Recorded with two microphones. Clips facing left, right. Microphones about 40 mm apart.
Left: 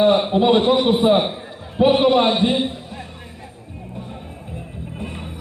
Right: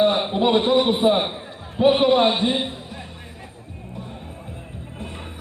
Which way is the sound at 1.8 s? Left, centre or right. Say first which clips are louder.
Left 1 dB; centre.